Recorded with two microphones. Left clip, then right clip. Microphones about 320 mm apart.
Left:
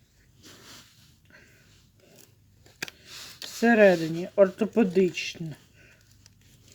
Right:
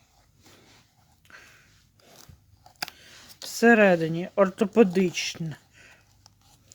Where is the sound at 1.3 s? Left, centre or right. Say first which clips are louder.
Right 6 dB; right.